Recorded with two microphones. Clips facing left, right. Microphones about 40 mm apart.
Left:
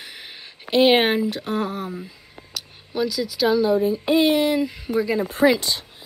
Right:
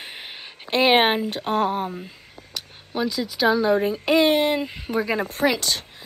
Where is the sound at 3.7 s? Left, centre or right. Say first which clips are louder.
Left 1 dB; right.